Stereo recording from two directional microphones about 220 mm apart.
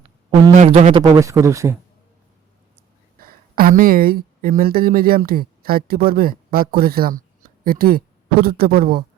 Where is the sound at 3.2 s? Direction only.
40° right (ahead or behind).